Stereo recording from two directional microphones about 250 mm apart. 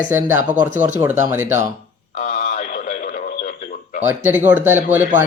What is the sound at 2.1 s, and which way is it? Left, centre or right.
Radio, left.